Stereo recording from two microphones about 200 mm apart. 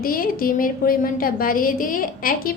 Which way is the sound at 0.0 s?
45° left (ahead or behind).